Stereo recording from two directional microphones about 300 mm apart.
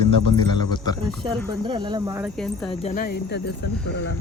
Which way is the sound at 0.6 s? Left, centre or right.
Centre.